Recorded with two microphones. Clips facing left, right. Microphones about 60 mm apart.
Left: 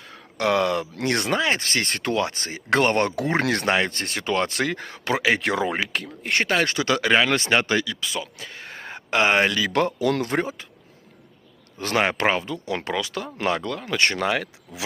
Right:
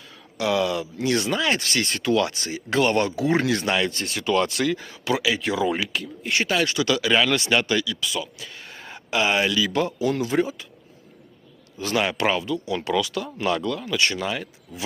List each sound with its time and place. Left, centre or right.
0.0 s a sound: left
0.9 s speech: left
1.4 s speech: left
2.1 s speech: left
3.4 s speech: left
3.7 s speech: left
5.4 s speech: left
5.6 s speech: left
11.8 s speech: left
14.3 s speech: left